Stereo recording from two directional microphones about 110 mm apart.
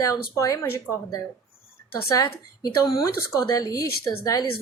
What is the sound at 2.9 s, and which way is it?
Speech, 30° left (ahead or behind).